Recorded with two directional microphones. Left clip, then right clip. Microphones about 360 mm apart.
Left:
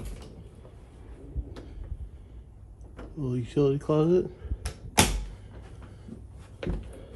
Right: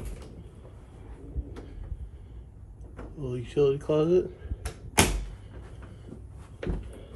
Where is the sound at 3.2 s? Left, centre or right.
Left.